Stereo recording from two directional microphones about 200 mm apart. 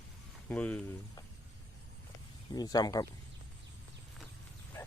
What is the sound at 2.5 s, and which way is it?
Speech, 20° left (ahead or behind).